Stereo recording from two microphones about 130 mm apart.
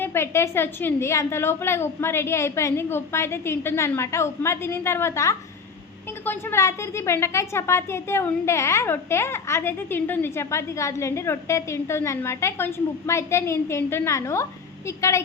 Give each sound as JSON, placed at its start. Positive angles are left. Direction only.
{"t": 0.0, "sound": "a woman's voice", "side_deg": 20}